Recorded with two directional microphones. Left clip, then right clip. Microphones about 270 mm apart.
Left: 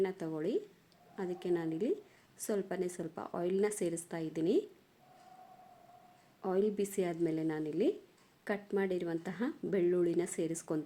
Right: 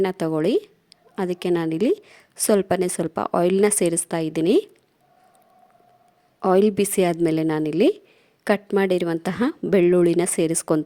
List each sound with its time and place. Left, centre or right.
0.0 s a woman's voice: right
6.4 s a woman's voice: right